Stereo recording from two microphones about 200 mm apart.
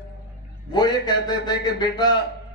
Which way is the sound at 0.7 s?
20° left (ahead or behind).